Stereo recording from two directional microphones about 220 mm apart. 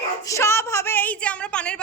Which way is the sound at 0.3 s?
10° left (ahead or behind).